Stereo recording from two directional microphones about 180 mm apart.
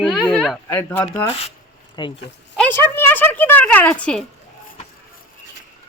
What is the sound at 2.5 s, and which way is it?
A woman's voice, 10° left (ahead or behind).